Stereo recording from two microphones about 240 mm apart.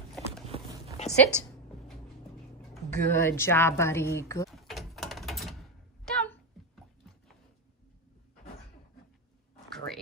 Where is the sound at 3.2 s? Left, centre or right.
Centre.